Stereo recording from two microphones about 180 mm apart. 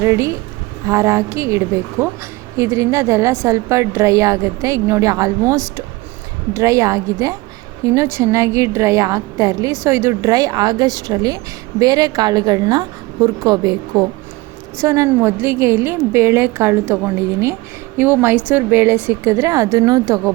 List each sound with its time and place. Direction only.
0.0 s a woman's voice: 15° right (ahead or behind)